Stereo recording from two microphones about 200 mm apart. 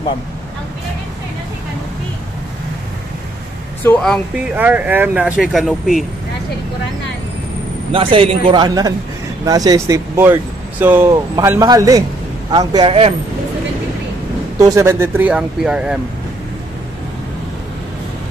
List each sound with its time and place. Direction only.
3.8 s speech: 5° left (ahead or behind)
4.6 s speech: 10° right (ahead or behind)
7.9 s a man's voice: 25° right (ahead or behind)
14.6 s speech: 15° right (ahead or behind)